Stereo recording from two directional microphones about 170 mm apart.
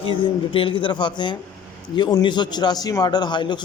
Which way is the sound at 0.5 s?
30° left (ahead or behind).